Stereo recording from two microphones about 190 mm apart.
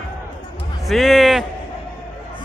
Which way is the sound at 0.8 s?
Centre (ahead or behind).